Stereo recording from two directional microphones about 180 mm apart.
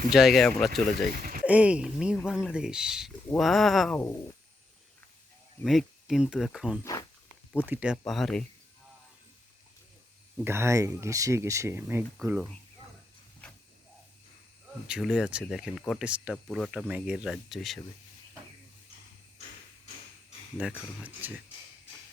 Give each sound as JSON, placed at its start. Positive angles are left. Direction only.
{"t": 0.1, "sound": "speech", "side_deg": 0}
{"t": 1.1, "sound": "speech", "side_deg": -50}
{"t": 1.5, "sound": "speech", "side_deg": -5}
{"t": 3.9, "sound": "speech", "side_deg": 15}
{"t": 5.6, "sound": "speech", "side_deg": 0}
{"t": 10.4, "sound": "speech", "side_deg": -15}
{"t": 14.8, "sound": "speech", "side_deg": -5}
{"t": 20.6, "sound": "speech", "side_deg": -5}